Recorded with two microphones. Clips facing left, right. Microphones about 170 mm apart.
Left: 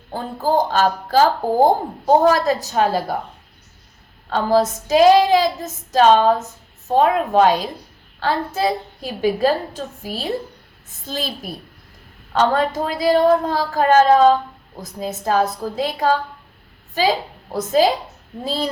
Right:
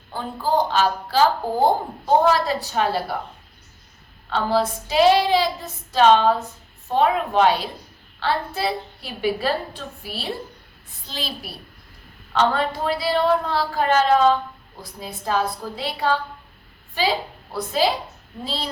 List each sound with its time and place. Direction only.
0.1 s speech: 45° left (ahead or behind)
4.3 s a woman's voice: 45° left (ahead or behind)